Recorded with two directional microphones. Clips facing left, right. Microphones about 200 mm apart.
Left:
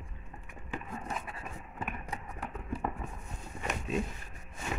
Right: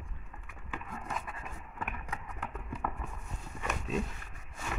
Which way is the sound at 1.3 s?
35° left (ahead or behind).